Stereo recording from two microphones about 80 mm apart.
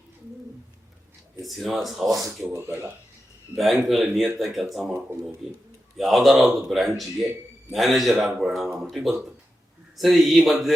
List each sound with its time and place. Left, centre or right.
1.4 s speech: centre
2.4 s speech: right
3.5 s speech: centre
6.0 s speech: centre